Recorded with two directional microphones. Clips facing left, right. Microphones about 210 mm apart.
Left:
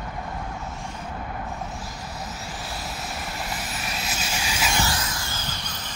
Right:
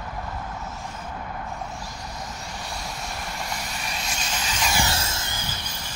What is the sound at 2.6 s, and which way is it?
Vehicle, 5° left (ahead or behind).